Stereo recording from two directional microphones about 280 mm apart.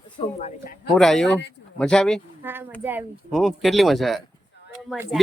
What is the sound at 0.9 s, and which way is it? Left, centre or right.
A child's voice, centre.